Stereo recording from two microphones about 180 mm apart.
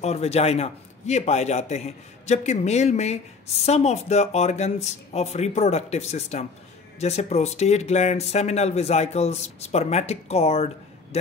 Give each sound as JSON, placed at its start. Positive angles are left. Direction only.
{"t": 0.0, "sound": "a man's voice", "side_deg": 35}